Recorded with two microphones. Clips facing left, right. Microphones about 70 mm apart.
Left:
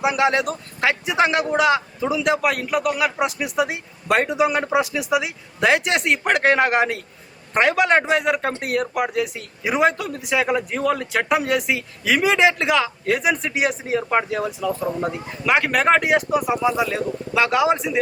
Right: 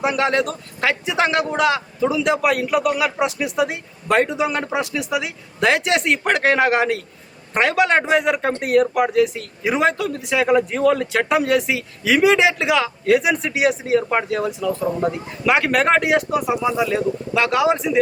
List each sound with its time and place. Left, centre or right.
0.0 s a man's voice: centre